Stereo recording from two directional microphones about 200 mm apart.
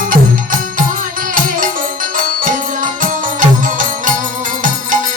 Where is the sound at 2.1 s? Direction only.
45° right (ahead or behind).